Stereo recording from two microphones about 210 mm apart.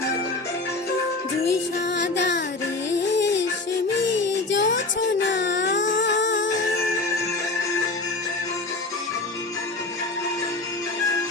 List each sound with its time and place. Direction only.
2.0 s music: 55° left (ahead or behind)
4.1 s child singing: 60° left (ahead or behind)
5.3 s baby cry: 55° left (ahead or behind)
6.0 s music: 60° left (ahead or behind)